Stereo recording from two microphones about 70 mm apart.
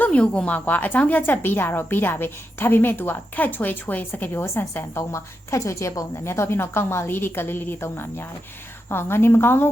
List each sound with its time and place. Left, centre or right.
0.0 s a woman's voice: centre; by 9.6 s left